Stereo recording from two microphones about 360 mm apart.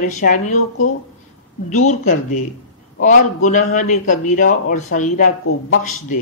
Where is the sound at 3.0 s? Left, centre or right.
Left.